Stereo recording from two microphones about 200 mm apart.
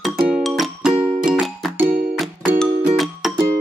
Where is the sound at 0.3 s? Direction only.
Centre (ahead or behind).